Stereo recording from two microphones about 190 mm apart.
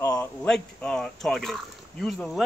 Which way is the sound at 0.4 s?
5° left (ahead or behind).